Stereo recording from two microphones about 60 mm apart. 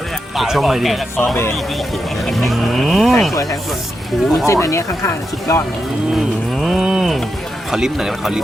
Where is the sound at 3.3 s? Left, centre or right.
Left.